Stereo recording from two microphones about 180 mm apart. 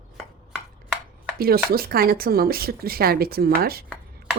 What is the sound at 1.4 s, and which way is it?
Speech, 55° right (ahead or behind).